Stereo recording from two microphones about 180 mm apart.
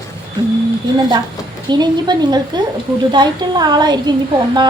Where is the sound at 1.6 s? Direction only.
25° right (ahead or behind).